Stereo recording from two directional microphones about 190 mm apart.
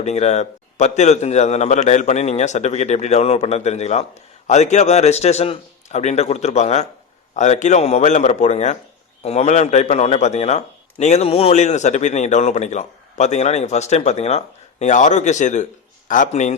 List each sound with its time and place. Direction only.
0.0 s a man's voice: 35° left (ahead or behind)